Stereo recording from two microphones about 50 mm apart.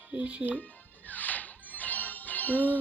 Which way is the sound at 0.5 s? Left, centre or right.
Left.